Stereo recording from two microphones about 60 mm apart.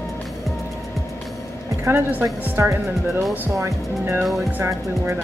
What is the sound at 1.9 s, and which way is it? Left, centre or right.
Speech, right.